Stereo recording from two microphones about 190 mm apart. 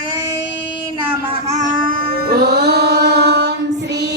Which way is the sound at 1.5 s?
40° right (ahead or behind).